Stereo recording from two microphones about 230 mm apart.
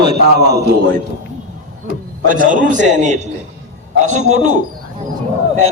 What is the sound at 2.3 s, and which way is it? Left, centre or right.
A man's voice, right.